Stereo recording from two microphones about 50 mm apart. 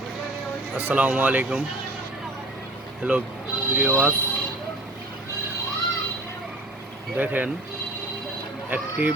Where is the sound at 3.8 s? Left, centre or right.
Right.